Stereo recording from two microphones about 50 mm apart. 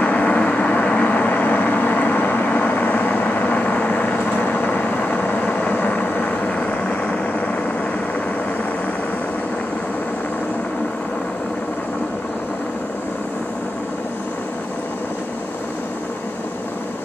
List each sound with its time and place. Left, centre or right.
0.0 s vehicle: left